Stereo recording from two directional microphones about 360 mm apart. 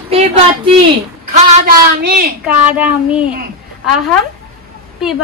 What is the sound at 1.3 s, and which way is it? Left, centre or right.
Speech, right.